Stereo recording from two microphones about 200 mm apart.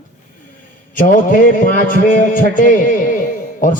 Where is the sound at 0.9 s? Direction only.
40° left (ahead or behind).